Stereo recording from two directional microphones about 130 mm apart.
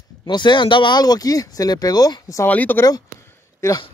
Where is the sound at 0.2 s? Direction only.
35° left (ahead or behind).